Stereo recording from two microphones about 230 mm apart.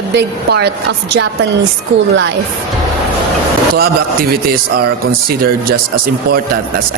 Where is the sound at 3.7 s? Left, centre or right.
Right.